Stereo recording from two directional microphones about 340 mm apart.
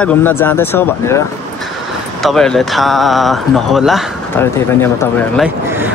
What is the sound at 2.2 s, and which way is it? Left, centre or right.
Speech, centre.